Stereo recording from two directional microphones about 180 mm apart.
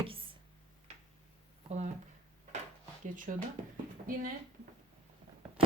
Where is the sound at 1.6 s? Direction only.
40° right (ahead or behind).